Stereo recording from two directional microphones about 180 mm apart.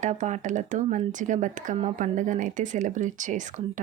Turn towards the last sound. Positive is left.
turn(degrees=-45)  # may be behind; listen again after turning